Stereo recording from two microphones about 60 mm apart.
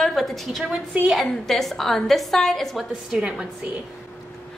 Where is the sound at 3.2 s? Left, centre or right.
Centre.